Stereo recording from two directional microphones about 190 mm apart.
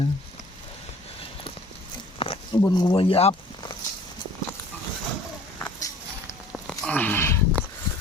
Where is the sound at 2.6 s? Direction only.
20° left (ahead or behind).